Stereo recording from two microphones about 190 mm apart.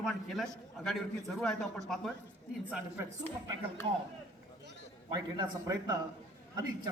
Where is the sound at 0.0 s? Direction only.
Centre (ahead or behind).